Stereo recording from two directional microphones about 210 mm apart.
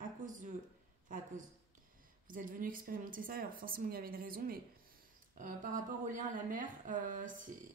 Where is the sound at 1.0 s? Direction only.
40° right (ahead or behind).